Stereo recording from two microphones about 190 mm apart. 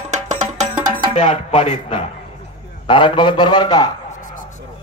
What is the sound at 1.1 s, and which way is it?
Speech, 35° left (ahead or behind).